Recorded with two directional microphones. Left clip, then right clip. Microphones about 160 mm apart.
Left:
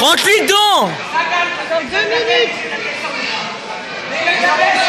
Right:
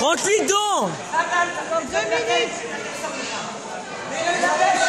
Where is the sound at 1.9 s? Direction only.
50° left (ahead or behind).